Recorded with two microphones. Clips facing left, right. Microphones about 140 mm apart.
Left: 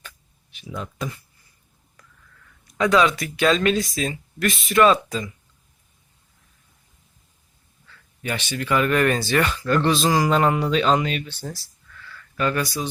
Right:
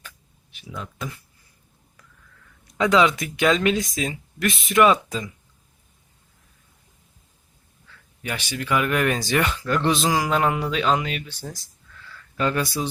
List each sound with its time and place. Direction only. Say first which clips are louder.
0.8 s speech: left 3 dB; 5° right (ahead or behind)
2.7 s speech: even; 20° right (ahead or behind)
8.2 s speech: left 2 dB; 10° right (ahead or behind)
12.4 s speech: even; 20° right (ahead or behind)